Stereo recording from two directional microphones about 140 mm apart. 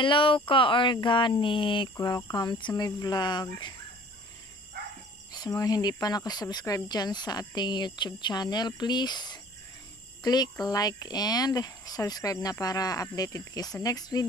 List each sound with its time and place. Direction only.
0.0 s speech: 35° left (ahead or behind)
5.3 s speech: 25° left (ahead or behind)